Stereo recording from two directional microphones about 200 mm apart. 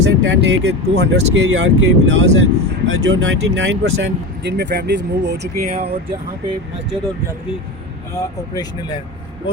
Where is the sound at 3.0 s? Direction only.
65° right (ahead or behind).